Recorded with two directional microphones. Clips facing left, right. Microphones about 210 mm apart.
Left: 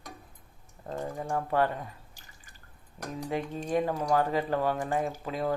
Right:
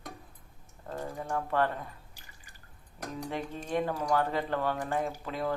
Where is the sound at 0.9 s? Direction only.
25° left (ahead or behind).